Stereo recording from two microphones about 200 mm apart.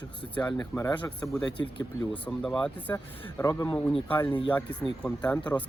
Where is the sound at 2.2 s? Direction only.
5° left (ahead or behind).